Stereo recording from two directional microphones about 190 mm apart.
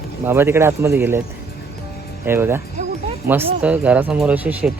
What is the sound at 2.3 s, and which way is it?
Speech, 10° right (ahead or behind).